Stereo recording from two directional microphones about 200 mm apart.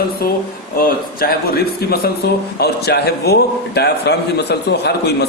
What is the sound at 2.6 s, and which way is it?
A man's voice, 55° left (ahead or behind).